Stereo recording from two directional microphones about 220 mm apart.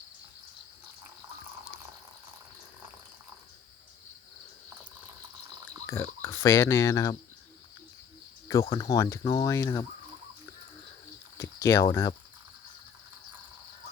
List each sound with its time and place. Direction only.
5.8 s speech: 10° left (ahead or behind)
8.7 s speech: 15° left (ahead or behind)
11.3 s a sound: 15° left (ahead or behind)